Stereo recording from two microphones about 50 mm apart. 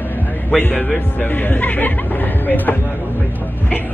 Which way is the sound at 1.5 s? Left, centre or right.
Left.